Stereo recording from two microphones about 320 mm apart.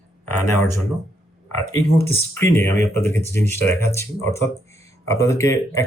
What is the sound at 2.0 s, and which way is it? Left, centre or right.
Speech, centre.